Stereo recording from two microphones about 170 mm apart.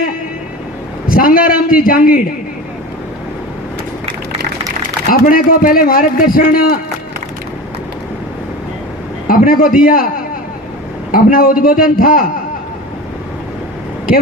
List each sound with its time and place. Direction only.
1.1 s a man's voice: 55° left (ahead or behind)
5.2 s a man's voice: 55° left (ahead or behind)
9.2 s a man's voice: 55° left (ahead or behind)
11.1 s a man's voice: 55° left (ahead or behind)